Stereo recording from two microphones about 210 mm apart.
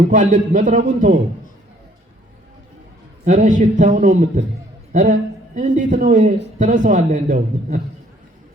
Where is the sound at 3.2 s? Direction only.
35° right (ahead or behind).